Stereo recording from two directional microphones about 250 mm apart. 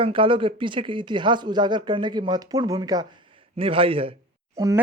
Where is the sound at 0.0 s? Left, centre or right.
Right.